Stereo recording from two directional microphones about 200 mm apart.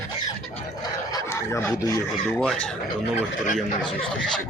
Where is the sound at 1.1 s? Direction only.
15° left (ahead or behind).